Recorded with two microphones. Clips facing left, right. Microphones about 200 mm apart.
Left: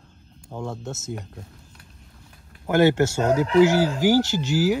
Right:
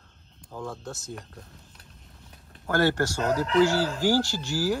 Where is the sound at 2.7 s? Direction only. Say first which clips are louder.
Left 6 dB; 20° left (ahead or behind).